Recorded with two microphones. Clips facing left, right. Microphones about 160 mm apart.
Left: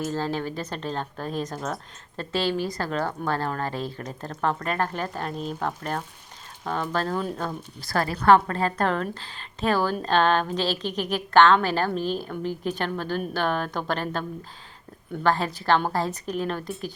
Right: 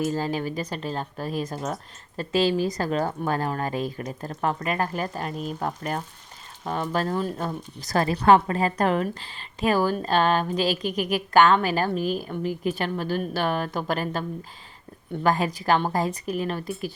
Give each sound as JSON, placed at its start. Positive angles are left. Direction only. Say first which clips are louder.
{"t": 0.1, "sound": "a woman's voice", "louder": "right 1 dB", "side_deg": -10}
{"t": 7.9, "sound": "a woman's voice", "louder": "right 1 dB", "side_deg": -20}